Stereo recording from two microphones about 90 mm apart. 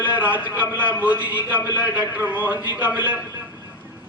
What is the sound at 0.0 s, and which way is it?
A man's voice, 20° right (ahead or behind).